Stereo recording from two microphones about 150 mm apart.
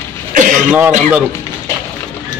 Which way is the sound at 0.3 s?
60° right (ahead or behind).